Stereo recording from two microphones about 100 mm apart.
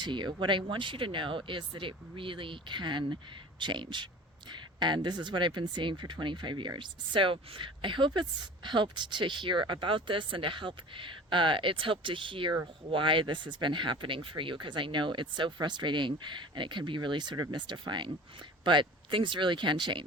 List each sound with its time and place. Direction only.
0.0 s speech: 50° right (ahead or behind)